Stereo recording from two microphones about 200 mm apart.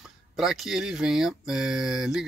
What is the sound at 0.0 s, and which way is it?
Speech, centre (ahead or behind).